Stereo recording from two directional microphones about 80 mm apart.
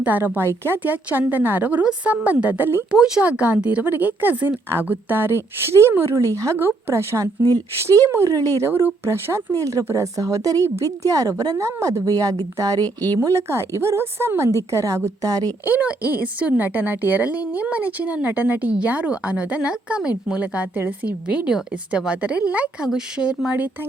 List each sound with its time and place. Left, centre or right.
0.0 s a woman's voice: right
2.9 s a woman's voice: centre; by 8.7 s right
8.7 s a woman's voice: right
13.1 s a woman's voice: right
15.6 s a woman's voice: centre